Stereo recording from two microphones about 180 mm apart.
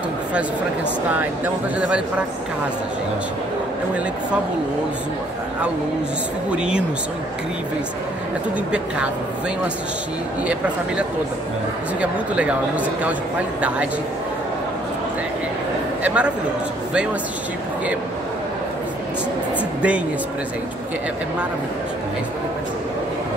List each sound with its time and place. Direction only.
1.1 s speech: 10° right (ahead or behind)
6.5 s speech: 5° right (ahead or behind)
8.7 s speech: 5° right (ahead or behind)
12.0 s speech: 5° right (ahead or behind)
16.0 s speech: 5° right (ahead or behind)